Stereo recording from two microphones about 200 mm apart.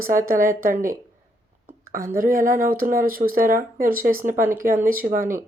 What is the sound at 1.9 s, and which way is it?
Speech, 45° right (ahead or behind).